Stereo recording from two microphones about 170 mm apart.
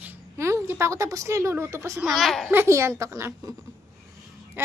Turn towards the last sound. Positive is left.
turn(degrees=-15)  # may be behind; listen again after turning